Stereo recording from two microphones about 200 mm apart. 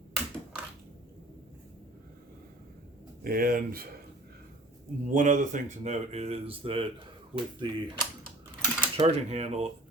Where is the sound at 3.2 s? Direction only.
45° right (ahead or behind).